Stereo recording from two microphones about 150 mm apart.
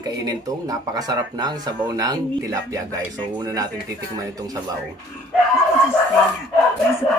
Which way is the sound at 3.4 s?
25° right (ahead or behind).